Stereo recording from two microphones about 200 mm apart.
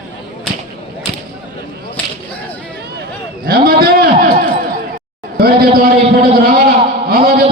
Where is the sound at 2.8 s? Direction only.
50° right (ahead or behind).